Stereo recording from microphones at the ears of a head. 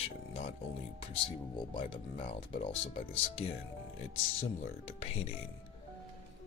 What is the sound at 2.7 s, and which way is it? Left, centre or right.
Speech, left.